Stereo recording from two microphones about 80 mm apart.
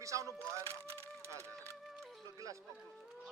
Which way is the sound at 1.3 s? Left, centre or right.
Right.